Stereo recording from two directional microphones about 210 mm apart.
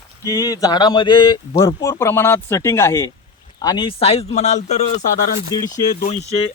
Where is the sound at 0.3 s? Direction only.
15° left (ahead or behind); by 5.0 s 30° left (ahead or behind).